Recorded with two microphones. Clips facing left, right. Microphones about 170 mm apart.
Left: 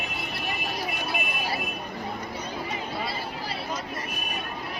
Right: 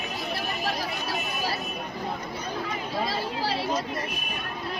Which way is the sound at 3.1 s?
90° right.